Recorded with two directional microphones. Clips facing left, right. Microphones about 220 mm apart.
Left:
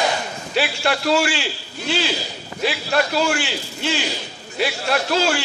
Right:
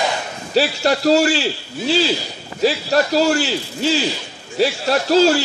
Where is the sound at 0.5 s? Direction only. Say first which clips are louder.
Right 5 dB; 40° right (ahead or behind).